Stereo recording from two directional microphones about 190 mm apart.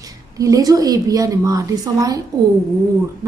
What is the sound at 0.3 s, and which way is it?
A woman's voice, 20° right (ahead or behind).